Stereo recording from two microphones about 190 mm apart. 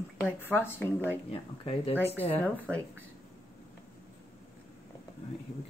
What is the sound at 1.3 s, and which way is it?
Speech, 30° left (ahead or behind).